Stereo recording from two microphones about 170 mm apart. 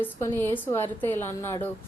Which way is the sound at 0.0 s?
10° left (ahead or behind).